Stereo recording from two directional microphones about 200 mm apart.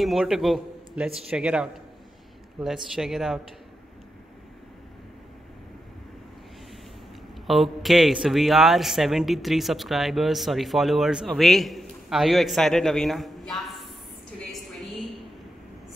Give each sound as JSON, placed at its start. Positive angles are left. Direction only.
{"t": 0.0, "sound": "speech", "side_deg": 0}
{"t": 7.4, "sound": "speech", "side_deg": 0}